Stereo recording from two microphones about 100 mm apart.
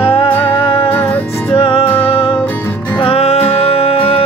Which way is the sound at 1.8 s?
20° left (ahead or behind).